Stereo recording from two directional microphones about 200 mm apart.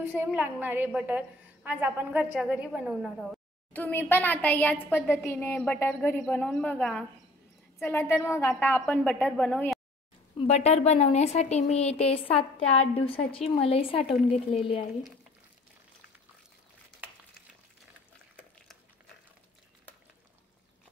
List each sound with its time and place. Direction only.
0.0 s a woman's voice: 10° right (ahead or behind)
10.3 s a woman's voice: 30° left (ahead or behind)